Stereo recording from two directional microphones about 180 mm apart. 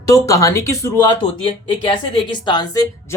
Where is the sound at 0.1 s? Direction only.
15° left (ahead or behind).